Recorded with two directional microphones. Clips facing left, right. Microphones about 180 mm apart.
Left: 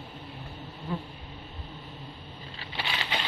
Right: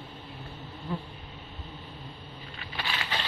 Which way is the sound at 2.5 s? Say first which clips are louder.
Left 1 dB; 25° left (ahead or behind).